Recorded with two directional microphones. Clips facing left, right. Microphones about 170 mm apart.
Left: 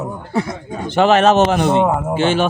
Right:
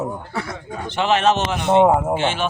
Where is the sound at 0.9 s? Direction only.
45° left (ahead or behind).